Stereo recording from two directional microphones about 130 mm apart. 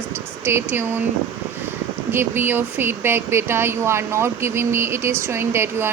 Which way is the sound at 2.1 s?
15° right (ahead or behind).